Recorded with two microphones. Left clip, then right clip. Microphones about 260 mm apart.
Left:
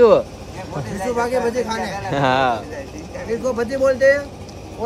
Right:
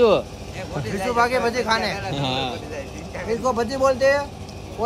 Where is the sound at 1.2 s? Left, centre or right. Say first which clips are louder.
Left 1 dB; centre.